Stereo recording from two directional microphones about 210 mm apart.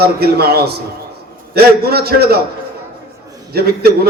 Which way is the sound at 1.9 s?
50° right (ahead or behind).